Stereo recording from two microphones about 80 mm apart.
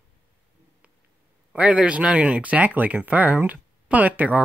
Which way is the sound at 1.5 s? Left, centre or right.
Centre.